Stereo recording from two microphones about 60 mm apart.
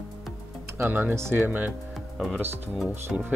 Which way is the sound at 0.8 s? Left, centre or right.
Right.